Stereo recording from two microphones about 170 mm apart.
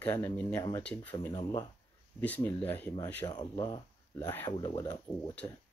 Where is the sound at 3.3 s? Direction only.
25° left (ahead or behind).